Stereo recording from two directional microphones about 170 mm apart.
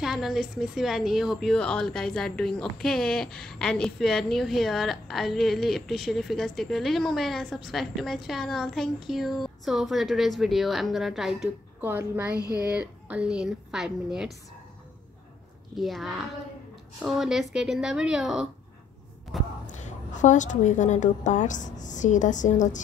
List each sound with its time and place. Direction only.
0.0 s a woman's voice: centre (ahead or behind)
11.8 s a woman's voice: 10° right (ahead or behind)
15.7 s a woman's voice: centre (ahead or behind)
19.6 s a woman's voice: 45° left (ahead or behind)